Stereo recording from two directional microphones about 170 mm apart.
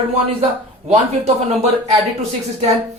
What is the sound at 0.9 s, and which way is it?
Speech, 40° right (ahead or behind).